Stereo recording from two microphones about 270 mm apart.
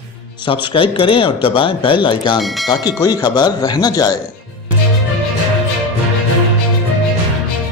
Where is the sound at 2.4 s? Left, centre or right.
Centre.